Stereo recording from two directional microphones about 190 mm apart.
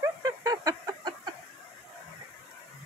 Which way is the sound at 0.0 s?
20° right (ahead or behind).